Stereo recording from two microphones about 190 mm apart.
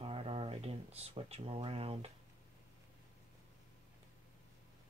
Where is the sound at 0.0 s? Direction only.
30° right (ahead or behind).